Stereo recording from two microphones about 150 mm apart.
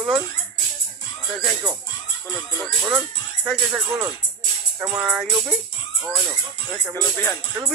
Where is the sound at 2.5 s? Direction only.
20° right (ahead or behind).